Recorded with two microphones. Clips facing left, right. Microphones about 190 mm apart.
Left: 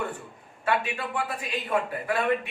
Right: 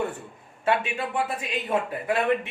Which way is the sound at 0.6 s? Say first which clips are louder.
Right 2 dB; 25° right (ahead or behind).